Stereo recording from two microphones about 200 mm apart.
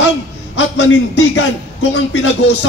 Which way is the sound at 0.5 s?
65° left (ahead or behind).